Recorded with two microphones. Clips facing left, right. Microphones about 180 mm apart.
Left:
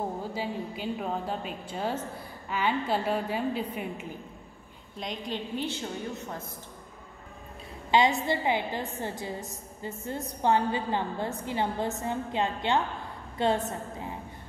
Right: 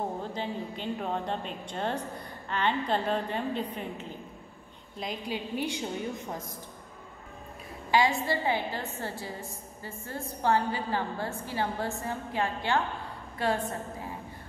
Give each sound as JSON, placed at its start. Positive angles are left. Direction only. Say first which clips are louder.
{"t": 0.2, "sound": "a woman's voice", "louder": "left 1 dB", "side_deg": 5}
{"t": 4.9, "sound": "a woman's voice", "louder": "even", "side_deg": -5}
{"t": 7.9, "sound": "a woman's voice", "louder": "left 2 dB", "side_deg": 20}